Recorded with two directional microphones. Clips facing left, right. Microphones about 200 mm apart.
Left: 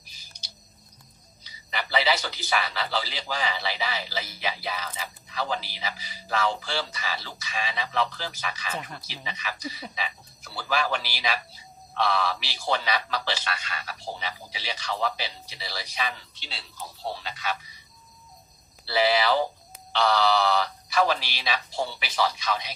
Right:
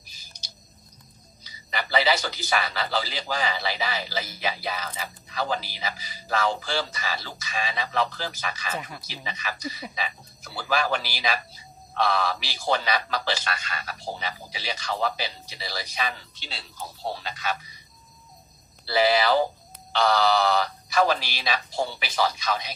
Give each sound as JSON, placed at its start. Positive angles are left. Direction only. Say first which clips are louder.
{"t": 0.0, "sound": "bird", "louder": "right 1 dB", "side_deg": -45}
{"t": 1.4, "sound": "a man's voice", "louder": "right 2 dB", "side_deg": -45}
{"t": 18.9, "sound": "a man's voice", "louder": "right 2 dB", "side_deg": -45}